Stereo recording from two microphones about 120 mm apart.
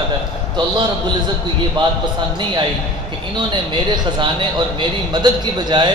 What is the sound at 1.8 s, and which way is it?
Speech, 45° right (ahead or behind).